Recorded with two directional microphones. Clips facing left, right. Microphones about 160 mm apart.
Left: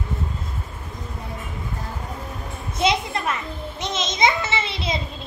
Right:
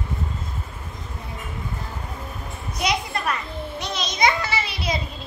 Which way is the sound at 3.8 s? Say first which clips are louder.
Left 1 dB; 20° left (ahead or behind).